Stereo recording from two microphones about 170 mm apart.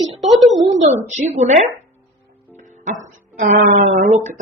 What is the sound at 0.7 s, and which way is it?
A woman's voice, 40° right (ahead or behind).